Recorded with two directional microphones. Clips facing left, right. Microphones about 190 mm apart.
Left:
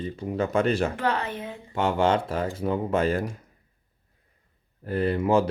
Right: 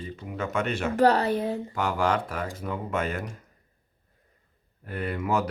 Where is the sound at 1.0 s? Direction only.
40° right (ahead or behind).